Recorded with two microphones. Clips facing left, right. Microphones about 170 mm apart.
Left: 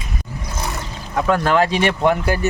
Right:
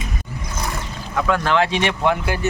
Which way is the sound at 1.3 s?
40° left (ahead or behind).